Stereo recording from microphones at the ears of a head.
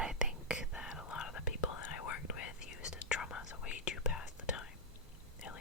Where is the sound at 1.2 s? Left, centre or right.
Left.